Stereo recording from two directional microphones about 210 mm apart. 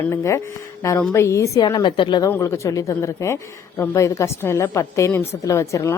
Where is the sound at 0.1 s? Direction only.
15° left (ahead or behind).